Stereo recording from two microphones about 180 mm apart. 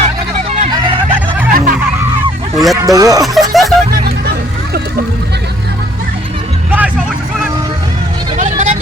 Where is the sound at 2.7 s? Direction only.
20° right (ahead or behind).